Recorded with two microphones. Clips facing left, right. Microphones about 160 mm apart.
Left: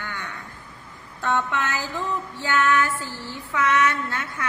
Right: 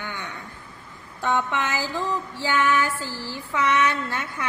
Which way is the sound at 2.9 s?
90° right.